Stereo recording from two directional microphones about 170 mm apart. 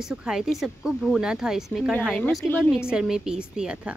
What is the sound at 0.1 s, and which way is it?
Speech, 5° right (ahead or behind).